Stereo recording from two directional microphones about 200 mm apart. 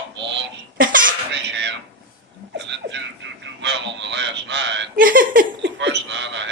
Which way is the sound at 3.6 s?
60° right (ahead or behind).